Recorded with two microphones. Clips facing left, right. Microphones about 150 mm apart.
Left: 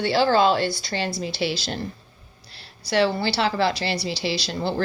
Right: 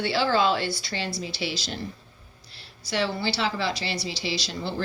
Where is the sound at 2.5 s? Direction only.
70° left (ahead or behind).